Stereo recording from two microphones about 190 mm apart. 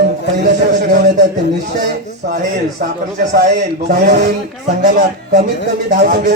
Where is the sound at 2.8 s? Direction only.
55° right (ahead or behind).